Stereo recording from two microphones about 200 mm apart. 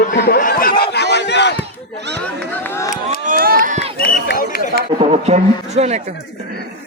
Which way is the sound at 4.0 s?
55° left (ahead or behind).